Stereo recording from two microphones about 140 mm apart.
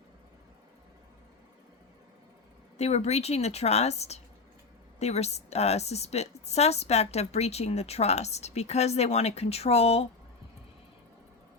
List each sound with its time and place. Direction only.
2.7 s a woman's voice: 50° left (ahead or behind)